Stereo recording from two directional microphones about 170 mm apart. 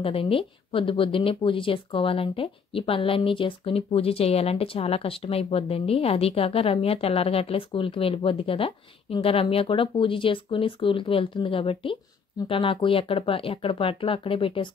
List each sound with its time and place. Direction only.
0.0 s speech: 35° left (ahead or behind)